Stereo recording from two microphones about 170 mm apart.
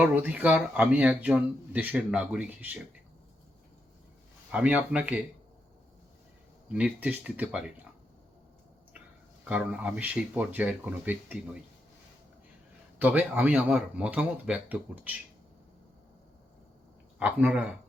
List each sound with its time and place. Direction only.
0.0 s speech: 10° right (ahead or behind)
4.5 s speech: 5° right (ahead or behind)
6.7 s speech: 10° right (ahead or behind)
9.4 s speech: 10° right (ahead or behind)
13.0 s speech: 10° right (ahead or behind)
17.2 s speech: 10° right (ahead or behind)